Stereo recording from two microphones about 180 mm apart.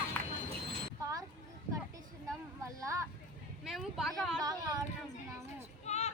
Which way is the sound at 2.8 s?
15° right (ahead or behind).